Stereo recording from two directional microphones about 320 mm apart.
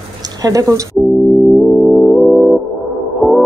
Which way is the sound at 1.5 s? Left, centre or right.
Centre.